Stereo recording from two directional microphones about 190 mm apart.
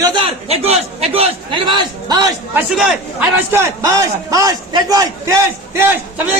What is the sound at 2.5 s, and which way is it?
A man's voice, 5° right (ahead or behind).